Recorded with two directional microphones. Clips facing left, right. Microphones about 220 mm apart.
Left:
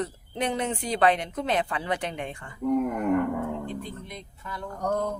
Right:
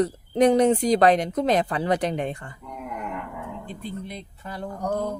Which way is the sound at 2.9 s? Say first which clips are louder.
Left 9 dB; 50° left (ahead or behind).